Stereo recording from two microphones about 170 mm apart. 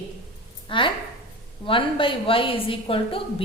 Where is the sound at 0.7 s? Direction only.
30° left (ahead or behind).